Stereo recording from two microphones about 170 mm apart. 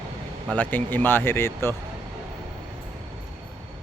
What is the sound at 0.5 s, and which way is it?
Speech, 10° left (ahead or behind).